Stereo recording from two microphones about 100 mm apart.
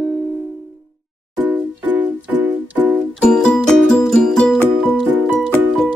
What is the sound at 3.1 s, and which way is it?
Music, 10° left (ahead or behind).